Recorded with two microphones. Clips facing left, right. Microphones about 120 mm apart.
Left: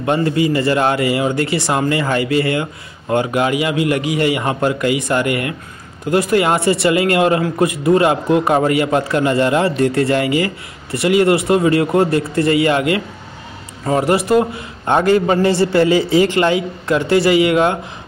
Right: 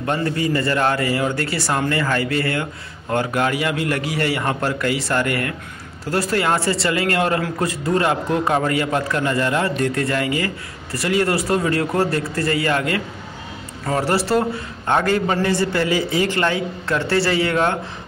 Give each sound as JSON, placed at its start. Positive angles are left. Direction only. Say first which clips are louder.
{"t": 0.0, "sound": "a man's voice", "louder": "left 5 dB", "side_deg": 20}